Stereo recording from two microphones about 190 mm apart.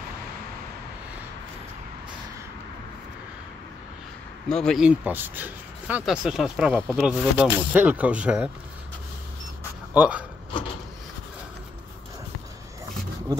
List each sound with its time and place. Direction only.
4.5 s speech: centre (ahead or behind)
9.9 s speech: 5° right (ahead or behind)